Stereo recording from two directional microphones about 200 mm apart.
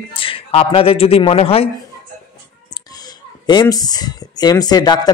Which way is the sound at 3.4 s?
20° left (ahead or behind).